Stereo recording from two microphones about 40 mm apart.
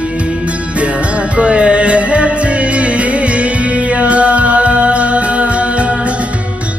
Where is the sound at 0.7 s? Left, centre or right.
Right.